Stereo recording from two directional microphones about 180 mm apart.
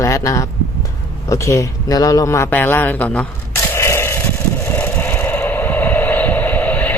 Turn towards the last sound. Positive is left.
turn(degrees=10)  # may be behind; listen again after turning